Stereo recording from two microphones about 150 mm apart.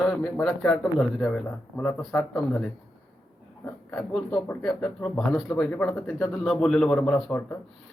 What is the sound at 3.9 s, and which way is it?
Speech, 10° left (ahead or behind).